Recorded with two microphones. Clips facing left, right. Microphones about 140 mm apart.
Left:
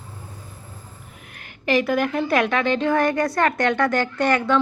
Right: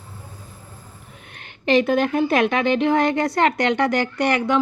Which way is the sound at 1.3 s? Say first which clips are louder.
Right 3 dB; 25° right (ahead or behind).